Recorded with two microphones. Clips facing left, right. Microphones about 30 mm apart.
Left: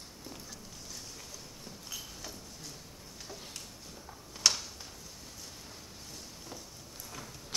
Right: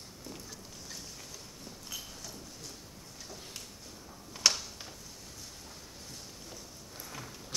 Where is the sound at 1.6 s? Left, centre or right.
Centre.